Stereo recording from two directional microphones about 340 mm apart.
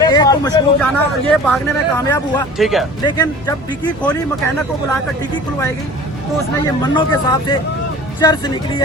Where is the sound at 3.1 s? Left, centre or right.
Centre.